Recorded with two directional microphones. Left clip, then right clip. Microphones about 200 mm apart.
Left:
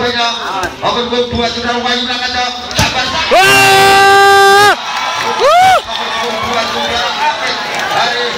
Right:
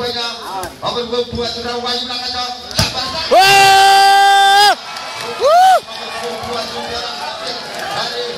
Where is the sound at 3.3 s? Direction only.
20° right (ahead or behind).